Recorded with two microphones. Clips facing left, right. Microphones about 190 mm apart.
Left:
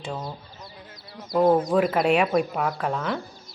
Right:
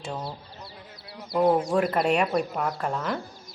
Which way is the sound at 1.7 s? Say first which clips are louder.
Left 3 dB; centre (ahead or behind).